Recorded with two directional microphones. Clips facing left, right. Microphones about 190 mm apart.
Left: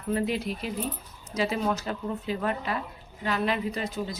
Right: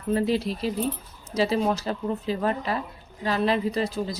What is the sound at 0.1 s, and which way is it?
A woman's voice, 35° right (ahead or behind).